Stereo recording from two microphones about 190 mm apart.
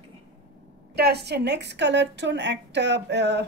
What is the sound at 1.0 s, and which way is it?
A woman's voice, 60° right (ahead or behind).